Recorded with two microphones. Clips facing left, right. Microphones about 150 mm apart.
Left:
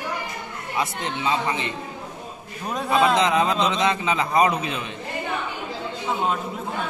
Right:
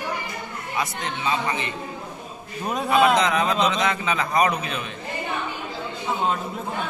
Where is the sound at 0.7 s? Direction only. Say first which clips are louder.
Left 2 dB; 25° left (ahead or behind).